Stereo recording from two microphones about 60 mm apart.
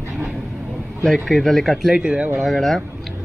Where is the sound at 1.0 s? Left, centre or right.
Centre.